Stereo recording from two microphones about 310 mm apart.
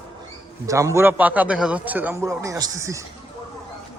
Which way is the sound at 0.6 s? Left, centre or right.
Centre.